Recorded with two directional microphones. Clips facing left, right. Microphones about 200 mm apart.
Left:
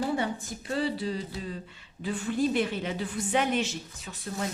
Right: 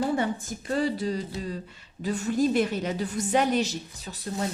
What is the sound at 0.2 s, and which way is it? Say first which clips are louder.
Speech: right 3 dB; 45° right (ahead or behind).